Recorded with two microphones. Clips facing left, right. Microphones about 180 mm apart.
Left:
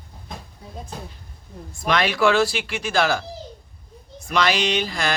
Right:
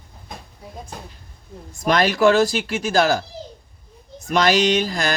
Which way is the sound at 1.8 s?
40° right (ahead or behind).